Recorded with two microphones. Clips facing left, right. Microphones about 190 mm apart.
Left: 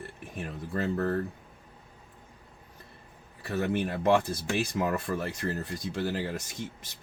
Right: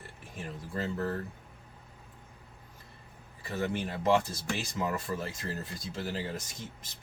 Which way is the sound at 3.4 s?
60° left (ahead or behind).